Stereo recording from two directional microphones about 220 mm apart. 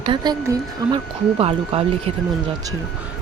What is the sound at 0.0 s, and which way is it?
A woman's voice, 20° right (ahead or behind).